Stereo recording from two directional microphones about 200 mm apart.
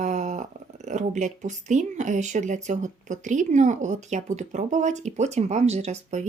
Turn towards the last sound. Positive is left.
turn(degrees=-35)  # may be behind; listen again after turning